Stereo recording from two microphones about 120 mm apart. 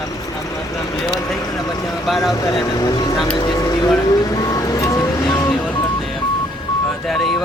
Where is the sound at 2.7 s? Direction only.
35° left (ahead or behind).